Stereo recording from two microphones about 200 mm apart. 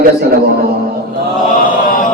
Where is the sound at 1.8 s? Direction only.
40° left (ahead or behind).